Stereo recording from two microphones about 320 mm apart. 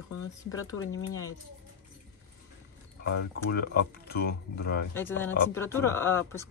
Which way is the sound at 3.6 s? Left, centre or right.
Left.